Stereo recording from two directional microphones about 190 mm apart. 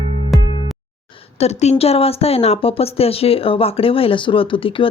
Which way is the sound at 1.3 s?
35° left (ahead or behind).